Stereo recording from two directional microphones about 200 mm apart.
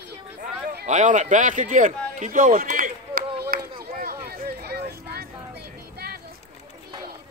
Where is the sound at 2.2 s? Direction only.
40° right (ahead or behind).